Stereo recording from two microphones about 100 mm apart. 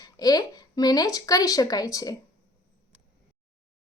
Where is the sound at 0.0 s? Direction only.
40° left (ahead or behind).